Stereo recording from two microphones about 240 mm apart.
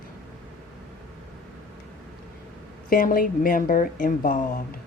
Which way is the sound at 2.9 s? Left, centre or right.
Left.